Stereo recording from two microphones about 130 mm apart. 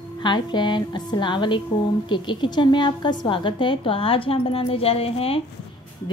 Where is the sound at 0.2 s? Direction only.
35° left (ahead or behind).